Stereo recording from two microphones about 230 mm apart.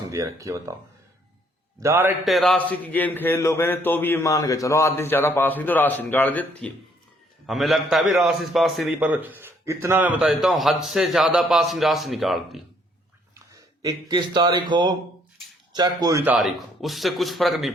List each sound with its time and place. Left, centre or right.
0.1 s speech: centre
1.8 s a man's voice: centre
13.8 s a man's voice: centre